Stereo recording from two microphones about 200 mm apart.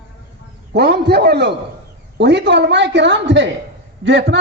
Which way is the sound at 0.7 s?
55° right (ahead or behind).